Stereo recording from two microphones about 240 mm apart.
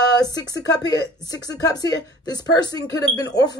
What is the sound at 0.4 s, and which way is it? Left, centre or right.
Speech, centre.